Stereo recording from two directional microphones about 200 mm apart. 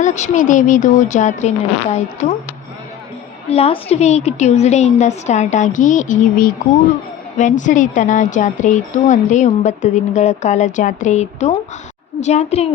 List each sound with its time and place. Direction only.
0.0 s a woman's voice: 35° left (ahead or behind)
3.5 s a woman's voice: 30° left (ahead or behind)